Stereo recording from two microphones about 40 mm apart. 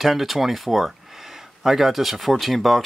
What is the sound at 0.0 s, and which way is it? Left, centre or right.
Speech, centre.